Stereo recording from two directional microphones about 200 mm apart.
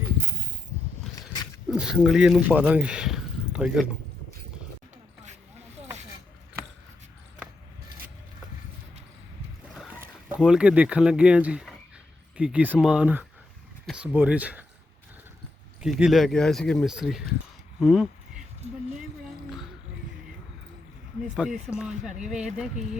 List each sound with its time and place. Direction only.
1.1 s wild animals: 20° left (ahead or behind)
1.7 s a man's voice: 5° right (ahead or behind)
10.0 s speech: 5° right (ahead or behind)
15.8 s speech: 5° right (ahead or behind)
17.7 s a sound: centre (ahead or behind)
21.3 s speech: 5° right (ahead or behind)